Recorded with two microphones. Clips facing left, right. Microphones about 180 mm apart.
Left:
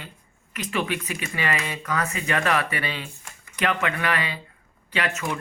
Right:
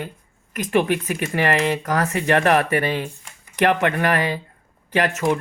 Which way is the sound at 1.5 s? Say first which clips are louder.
Right 10 dB; 80° right.